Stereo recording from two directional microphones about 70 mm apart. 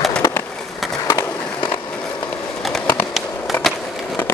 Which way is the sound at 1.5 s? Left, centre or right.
Left.